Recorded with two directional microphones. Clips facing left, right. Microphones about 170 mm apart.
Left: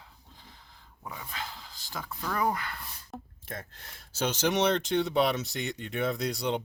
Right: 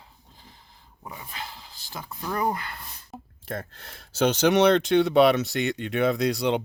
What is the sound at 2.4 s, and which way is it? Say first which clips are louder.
Speech: right 2 dB; 30° right (ahead or behind).